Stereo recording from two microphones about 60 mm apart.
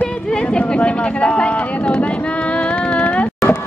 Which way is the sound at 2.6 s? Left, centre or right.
Left.